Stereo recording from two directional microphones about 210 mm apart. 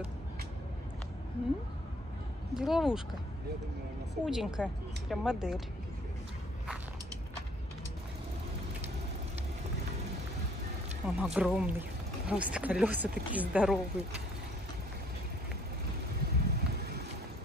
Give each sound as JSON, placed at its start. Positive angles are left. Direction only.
{"t": 2.5, "sound": "speech", "side_deg": 0}
{"t": 4.1, "sound": "speech", "side_deg": 0}
{"t": 11.1, "sound": "speech", "side_deg": -5}
{"t": 16.3, "sound": "vehicle", "side_deg": -50}